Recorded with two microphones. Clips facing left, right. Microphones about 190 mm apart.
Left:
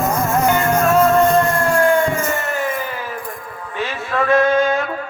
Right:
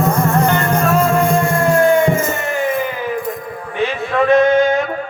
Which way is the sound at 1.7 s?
20° right (ahead or behind).